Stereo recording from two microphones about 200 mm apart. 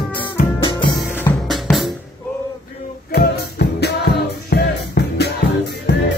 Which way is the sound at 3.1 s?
55° left (ahead or behind).